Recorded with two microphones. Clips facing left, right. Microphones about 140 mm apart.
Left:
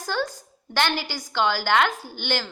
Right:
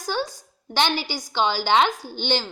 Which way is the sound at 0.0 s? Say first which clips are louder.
Even; 15° right (ahead or behind).